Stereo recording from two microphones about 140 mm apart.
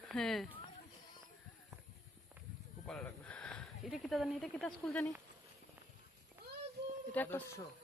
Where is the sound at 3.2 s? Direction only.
10° left (ahead or behind).